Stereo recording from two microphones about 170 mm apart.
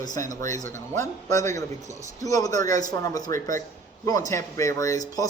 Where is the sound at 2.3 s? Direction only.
20° left (ahead or behind).